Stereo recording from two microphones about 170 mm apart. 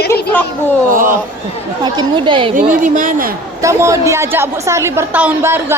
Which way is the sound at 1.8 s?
25° right (ahead or behind).